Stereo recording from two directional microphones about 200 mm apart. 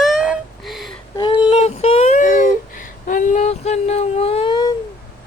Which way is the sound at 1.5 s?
30° left (ahead or behind).